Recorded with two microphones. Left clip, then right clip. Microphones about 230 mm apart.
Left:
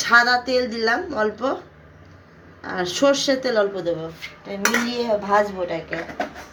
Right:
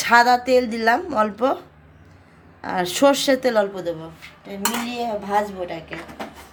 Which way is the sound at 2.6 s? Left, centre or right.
Right.